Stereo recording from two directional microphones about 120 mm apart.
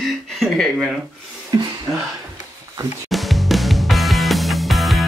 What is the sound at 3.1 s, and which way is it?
Music, centre (ahead or behind).